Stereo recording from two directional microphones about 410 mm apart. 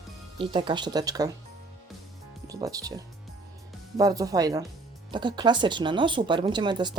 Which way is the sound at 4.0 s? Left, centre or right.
Centre.